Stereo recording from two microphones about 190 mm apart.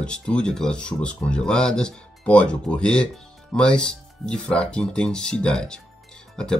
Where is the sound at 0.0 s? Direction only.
5° left (ahead or behind).